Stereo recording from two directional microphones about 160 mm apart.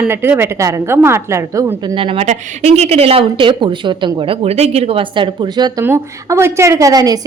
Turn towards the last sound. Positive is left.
turn(degrees=-25)  # may be behind; listen again after turning